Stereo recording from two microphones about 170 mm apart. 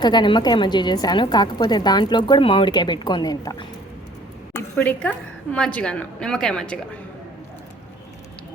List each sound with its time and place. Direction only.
0.0 s a woman's voice: 25° left (ahead or behind)
4.5 s a woman's voice: 10° left (ahead or behind)